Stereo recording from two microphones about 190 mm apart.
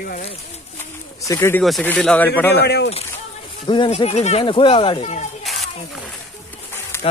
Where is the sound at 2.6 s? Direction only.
60° left (ahead or behind).